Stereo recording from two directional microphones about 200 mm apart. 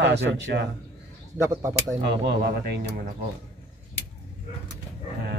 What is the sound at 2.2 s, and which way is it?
Speech, 55° right (ahead or behind).